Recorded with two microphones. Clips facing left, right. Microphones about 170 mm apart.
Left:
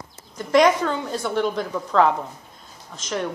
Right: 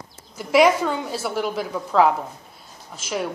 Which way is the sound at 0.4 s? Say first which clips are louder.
Even; 5° right (ahead or behind).